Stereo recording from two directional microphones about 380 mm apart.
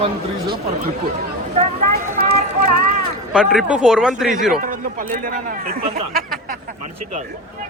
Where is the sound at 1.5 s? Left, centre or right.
Centre.